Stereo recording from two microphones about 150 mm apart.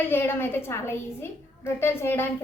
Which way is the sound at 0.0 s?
15° left (ahead or behind).